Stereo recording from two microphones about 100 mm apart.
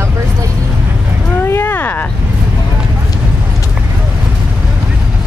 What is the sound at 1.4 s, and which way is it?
Speech, 20° left (ahead or behind).